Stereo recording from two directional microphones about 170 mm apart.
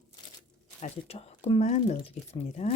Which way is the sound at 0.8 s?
35° left (ahead or behind).